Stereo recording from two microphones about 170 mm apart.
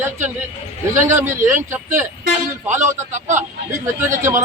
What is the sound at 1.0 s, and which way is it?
Speech, 45° right (ahead or behind).